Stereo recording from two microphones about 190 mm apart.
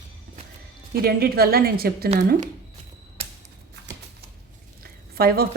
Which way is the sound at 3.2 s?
35° right (ahead or behind).